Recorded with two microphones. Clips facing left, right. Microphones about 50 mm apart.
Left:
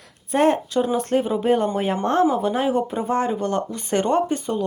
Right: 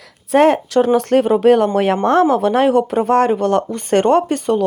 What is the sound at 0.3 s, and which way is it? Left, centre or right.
Speech, right.